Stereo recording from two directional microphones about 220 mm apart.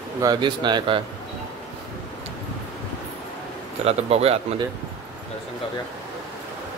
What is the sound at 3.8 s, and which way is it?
Speech, 30° right (ahead or behind).